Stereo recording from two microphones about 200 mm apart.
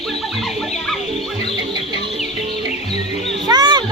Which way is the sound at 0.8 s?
Centre (ahead or behind).